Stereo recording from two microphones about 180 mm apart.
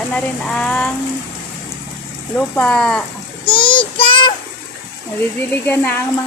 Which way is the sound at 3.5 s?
30° left (ahead or behind).